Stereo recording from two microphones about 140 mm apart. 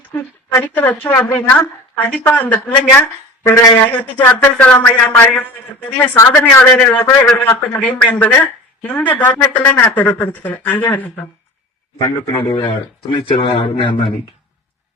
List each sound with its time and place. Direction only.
0.2 s speech: 15° left (ahead or behind)
11.9 s speech: 35° left (ahead or behind)